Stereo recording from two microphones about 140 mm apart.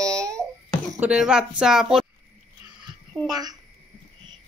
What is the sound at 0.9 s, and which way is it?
A woman's voice, 5° right (ahead or behind).